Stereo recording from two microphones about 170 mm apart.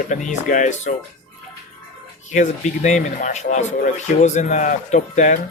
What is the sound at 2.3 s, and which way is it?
Speech, 45° left (ahead or behind).